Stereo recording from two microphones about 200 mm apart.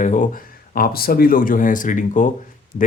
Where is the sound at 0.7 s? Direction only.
50° left (ahead or behind).